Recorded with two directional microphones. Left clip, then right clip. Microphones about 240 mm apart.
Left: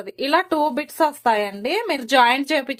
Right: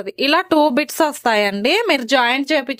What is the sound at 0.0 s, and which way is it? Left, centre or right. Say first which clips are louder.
Speech: right 3 dB; right.